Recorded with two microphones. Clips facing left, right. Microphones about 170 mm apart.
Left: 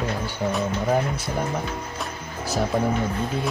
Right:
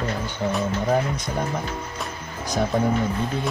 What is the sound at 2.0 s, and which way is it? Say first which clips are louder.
Music: even; 5° left (ahead or behind).